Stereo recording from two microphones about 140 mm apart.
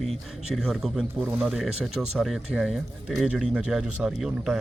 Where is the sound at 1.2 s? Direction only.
10° right (ahead or behind).